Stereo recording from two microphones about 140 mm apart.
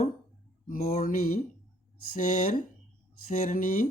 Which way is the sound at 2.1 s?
65° left (ahead or behind).